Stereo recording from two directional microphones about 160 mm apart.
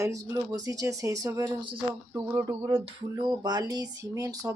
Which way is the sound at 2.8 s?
25° right (ahead or behind).